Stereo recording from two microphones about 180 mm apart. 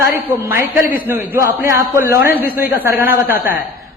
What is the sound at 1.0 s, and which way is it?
A man's voice, 10° right (ahead or behind).